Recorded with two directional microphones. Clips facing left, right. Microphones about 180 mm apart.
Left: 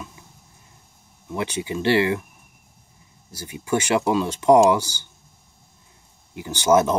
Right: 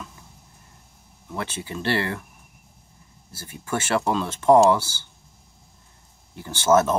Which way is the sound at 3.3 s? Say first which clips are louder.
Left 5 dB; 15° left (ahead or behind).